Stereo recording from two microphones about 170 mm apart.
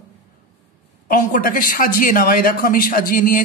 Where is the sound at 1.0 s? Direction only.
55° left (ahead or behind).